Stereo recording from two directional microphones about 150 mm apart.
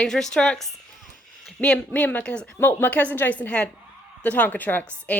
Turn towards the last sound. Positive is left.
turn(degrees=10)  # may be behind; listen again after turning